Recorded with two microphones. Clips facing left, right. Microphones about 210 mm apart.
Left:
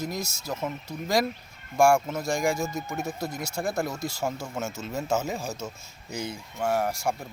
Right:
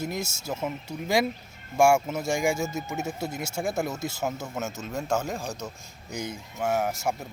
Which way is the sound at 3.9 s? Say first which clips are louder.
Right 1 dB; 25° right (ahead or behind).